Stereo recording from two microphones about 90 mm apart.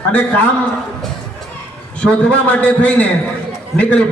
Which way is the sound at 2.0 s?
10° left (ahead or behind).